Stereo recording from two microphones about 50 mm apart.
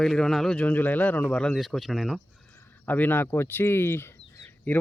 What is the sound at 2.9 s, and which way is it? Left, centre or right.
Speech, left.